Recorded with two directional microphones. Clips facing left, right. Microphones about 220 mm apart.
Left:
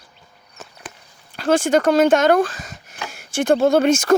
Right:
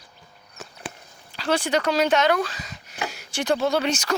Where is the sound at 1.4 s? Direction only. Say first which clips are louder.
Left 7 dB; 50° left (ahead or behind).